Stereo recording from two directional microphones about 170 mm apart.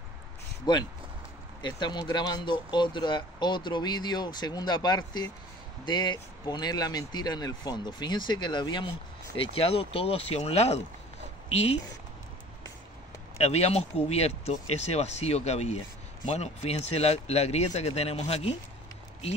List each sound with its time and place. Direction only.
0.7 s speech: 25° left (ahead or behind)
13.4 s speech: 40° left (ahead or behind)